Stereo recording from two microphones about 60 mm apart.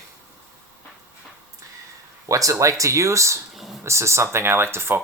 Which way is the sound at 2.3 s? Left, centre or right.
Right.